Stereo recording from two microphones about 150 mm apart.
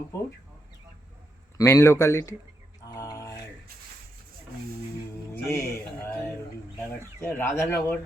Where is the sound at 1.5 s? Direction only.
20° left (ahead or behind).